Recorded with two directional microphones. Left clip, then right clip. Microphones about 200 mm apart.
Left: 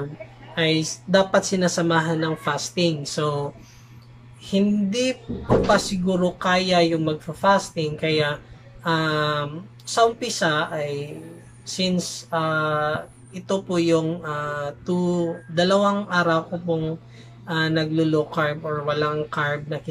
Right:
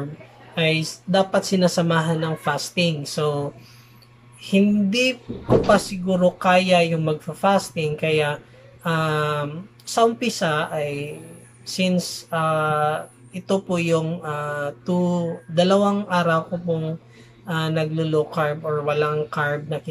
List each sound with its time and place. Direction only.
0.6 s speech: 5° right (ahead or behind)